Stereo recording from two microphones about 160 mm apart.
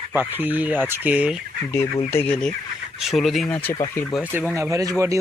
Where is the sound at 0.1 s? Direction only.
15° right (ahead or behind).